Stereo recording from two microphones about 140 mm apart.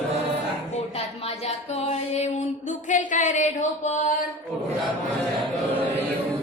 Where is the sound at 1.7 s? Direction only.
55° left (ahead or behind).